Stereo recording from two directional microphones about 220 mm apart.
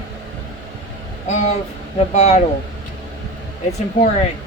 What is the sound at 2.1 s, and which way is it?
Speech, 30° left (ahead or behind).